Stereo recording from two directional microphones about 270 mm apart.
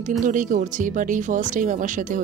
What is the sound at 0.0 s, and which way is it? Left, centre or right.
Speech, right.